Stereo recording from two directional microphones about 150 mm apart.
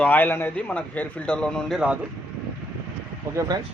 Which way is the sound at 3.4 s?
25° right (ahead or behind).